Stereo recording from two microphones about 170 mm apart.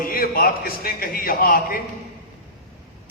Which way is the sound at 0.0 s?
60° left (ahead or behind).